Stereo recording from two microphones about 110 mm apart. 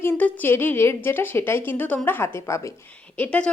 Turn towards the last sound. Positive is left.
turn(degrees=10)  # may be behind; listen again after turning